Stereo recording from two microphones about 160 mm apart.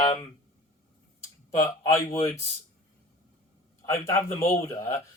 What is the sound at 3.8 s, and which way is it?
A man's voice, 15° left (ahead or behind).